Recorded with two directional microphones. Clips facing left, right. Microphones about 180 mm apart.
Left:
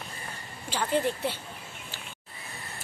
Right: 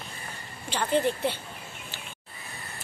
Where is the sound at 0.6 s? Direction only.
5° left (ahead or behind).